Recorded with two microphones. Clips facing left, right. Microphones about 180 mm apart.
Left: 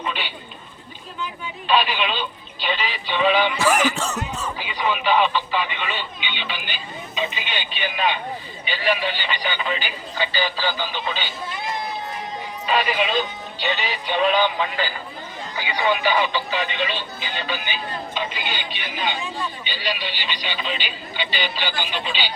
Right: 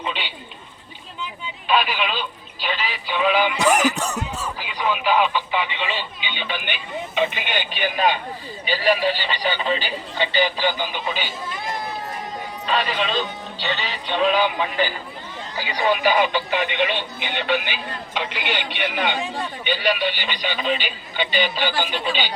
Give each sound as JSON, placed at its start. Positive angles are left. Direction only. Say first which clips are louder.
{"t": 1.6, "sound": "speech", "louder": "even", "side_deg": -5}
{"t": 4.4, "sound": "radio", "louder": "even", "side_deg": -5}
{"t": 6.4, "sound": "speech", "louder": "right 3 dB", "side_deg": -55}
{"t": 12.6, "sound": "speech", "louder": "left 2 dB", "side_deg": 10}
{"t": 14.3, "sound": "speech", "louder": "right 1 dB", "side_deg": -15}
{"t": 15.5, "sound": "speech", "louder": "right 1 dB", "side_deg": -40}